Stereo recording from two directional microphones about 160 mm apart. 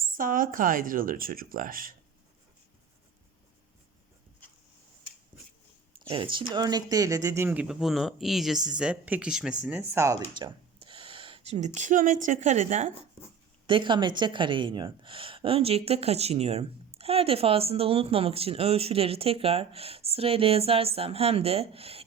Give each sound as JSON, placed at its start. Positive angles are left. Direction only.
{"t": 0.2, "sound": "speech", "side_deg": -60}
{"t": 6.1, "sound": "speech", "side_deg": -35}
{"t": 13.7, "sound": "speech", "side_deg": -30}